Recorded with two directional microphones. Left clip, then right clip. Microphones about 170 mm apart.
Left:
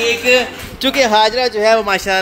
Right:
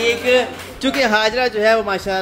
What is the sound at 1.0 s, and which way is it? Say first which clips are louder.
Speech: left 4 dB; 30° left (ahead or behind).